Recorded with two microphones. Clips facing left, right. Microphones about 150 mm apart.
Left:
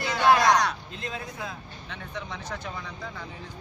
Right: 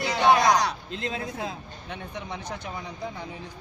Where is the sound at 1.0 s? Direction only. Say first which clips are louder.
Right 4 dB; 25° right (ahead or behind).